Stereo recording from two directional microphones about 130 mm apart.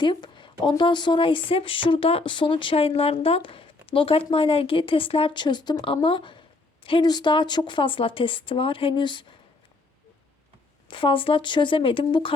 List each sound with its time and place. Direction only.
0.0 s a sound: 35° left (ahead or behind)
0.6 s a woman's voice: 40° left (ahead or behind)
10.8 s a woman's voice: 40° left (ahead or behind)